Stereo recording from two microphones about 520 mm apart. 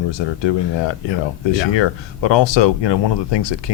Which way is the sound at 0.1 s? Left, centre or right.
Left.